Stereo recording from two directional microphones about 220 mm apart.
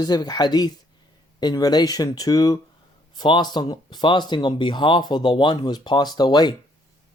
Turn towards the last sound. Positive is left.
turn(degrees=20)  # may be behind; listen again after turning